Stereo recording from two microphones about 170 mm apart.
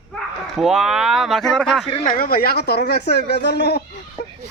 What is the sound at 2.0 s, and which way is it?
Speech, 55° left (ahead or behind).